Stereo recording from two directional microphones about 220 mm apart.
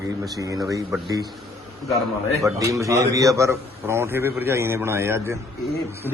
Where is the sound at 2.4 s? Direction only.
15° right (ahead or behind).